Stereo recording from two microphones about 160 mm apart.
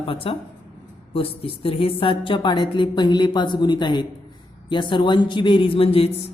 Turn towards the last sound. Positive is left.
turn(degrees=35)  # may be behind; listen again after turning